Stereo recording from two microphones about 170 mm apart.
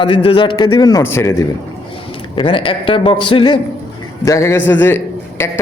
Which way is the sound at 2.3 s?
30° left (ahead or behind).